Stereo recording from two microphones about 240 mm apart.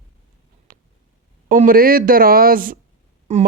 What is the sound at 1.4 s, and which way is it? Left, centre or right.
Speech, right.